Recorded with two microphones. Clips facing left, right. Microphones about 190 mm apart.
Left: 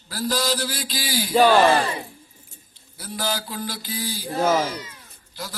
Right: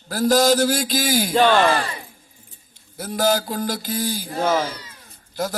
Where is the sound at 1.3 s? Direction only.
10° left (ahead or behind).